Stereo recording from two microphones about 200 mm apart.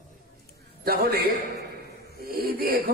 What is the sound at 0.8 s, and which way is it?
Speech, 50° right (ahead or behind).